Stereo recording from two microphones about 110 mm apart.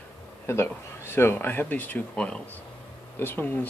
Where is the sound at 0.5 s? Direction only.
20° left (ahead or behind).